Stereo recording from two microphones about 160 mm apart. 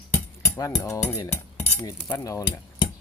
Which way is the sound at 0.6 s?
20° left (ahead or behind).